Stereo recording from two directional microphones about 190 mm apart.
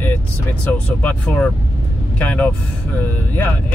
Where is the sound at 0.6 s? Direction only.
5° left (ahead or behind).